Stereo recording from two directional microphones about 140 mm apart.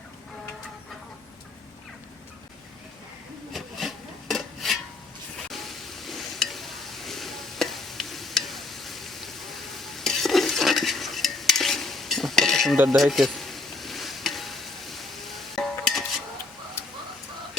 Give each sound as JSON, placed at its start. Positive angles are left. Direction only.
{"t": 3.5, "sound": "a sound", "side_deg": 0}
{"t": 12.7, "sound": "mechanisms", "side_deg": -15}
{"t": 13.0, "sound": "sizzle", "side_deg": 0}
{"t": 16.8, "sound": "bird", "side_deg": 20}